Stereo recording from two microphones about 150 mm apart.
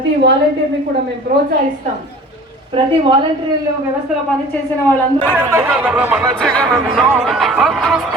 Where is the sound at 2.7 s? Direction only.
35° right (ahead or behind).